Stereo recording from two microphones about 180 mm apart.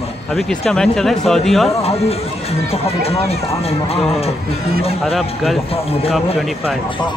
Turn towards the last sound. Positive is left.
turn(degrees=35)  # may be behind; listen again after turning